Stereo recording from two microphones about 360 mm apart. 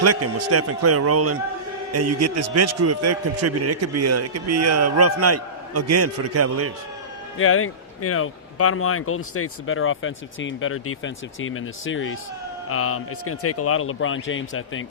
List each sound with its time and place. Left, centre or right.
0.0 s a man's voice: right
7.3 s speech: left